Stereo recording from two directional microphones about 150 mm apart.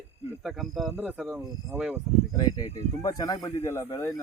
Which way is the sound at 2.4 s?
25° left (ahead or behind).